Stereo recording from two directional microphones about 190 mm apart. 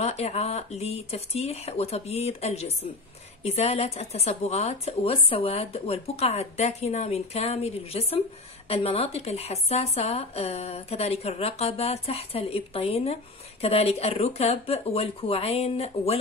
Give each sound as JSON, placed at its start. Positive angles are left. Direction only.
{"t": 0.0, "sound": "speech", "side_deg": 35}